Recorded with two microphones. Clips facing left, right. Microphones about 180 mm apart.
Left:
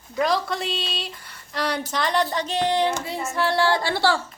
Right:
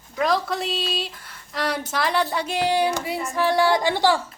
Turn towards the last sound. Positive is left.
turn(degrees=-15)  # may be behind; listen again after turning